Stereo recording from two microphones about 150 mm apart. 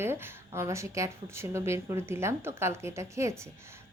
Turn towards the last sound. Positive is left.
turn(degrees=-20)  # may be behind; listen again after turning